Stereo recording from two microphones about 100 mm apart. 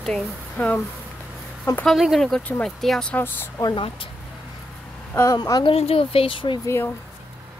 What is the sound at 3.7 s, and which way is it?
Speech, 60° left (ahead or behind).